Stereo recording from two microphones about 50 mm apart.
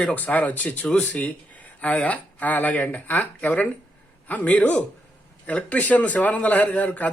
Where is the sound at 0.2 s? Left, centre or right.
Left.